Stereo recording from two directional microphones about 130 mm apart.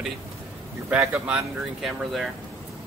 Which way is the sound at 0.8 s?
20° right (ahead or behind).